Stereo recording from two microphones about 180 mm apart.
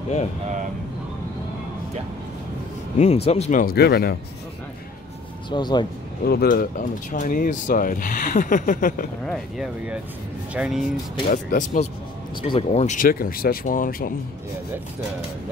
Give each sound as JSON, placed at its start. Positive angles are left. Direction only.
{"t": 3.3, "sound": "speech", "side_deg": 35}
{"t": 3.6, "sound": "speech", "side_deg": 60}
{"t": 5.5, "sound": "speech", "side_deg": 25}
{"t": 6.2, "sound": "speech", "side_deg": 55}
{"t": 9.2, "sound": "speech", "side_deg": 0}
{"t": 11.2, "sound": "speech", "side_deg": 45}
{"t": 12.4, "sound": "speech", "side_deg": 35}